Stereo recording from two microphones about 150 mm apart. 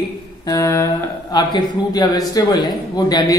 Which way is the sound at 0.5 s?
20° left (ahead or behind).